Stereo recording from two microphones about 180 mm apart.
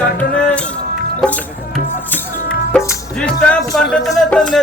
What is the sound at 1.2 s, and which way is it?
Music, 5° left (ahead or behind).